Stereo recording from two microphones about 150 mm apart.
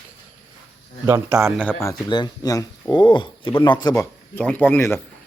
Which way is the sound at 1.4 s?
15° right (ahead or behind).